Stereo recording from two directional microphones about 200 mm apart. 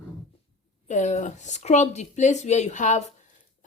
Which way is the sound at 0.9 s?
35° left (ahead or behind).